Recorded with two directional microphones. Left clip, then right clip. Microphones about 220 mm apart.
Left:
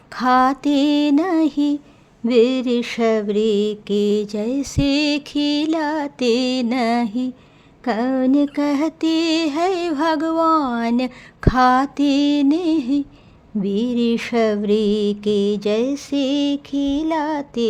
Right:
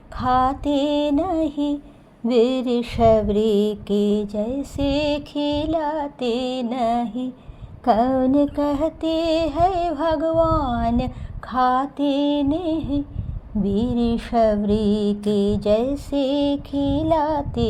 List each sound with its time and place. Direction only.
0.2 s mantra: 25° left (ahead or behind)
2.3 s mantra: 45° left (ahead or behind)
2.6 s mantra: 20° left (ahead or behind)
7.9 s speech: 10° left (ahead or behind)
8.8 s mantra: 25° left (ahead or behind)
10.2 s a sound: 30° left (ahead or behind)
10.8 s mantra: 25° left (ahead or behind)
14.2 s mantra: 55° left (ahead or behind)
15.1 s mantra: 20° left (ahead or behind)
16.4 s mantra: 50° left (ahead or behind)